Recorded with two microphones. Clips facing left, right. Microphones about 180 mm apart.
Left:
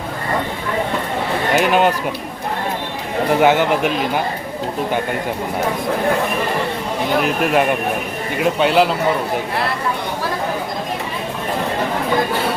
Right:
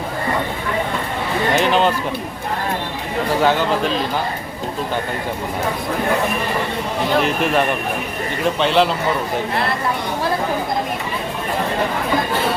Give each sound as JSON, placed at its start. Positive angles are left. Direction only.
{"t": 1.5, "sound": "a sound", "side_deg": 10}
{"t": 3.4, "sound": "speech", "side_deg": 15}
{"t": 7.2, "sound": "speech", "side_deg": 10}